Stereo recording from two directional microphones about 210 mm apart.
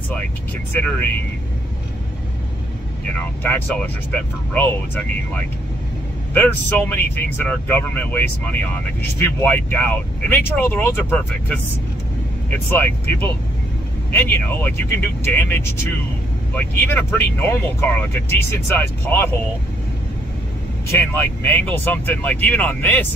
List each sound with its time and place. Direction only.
0.7 s speech: 10° left (ahead or behind)
3.2 s speech: 10° left (ahead or behind)
21.1 s speech: 10° left (ahead or behind)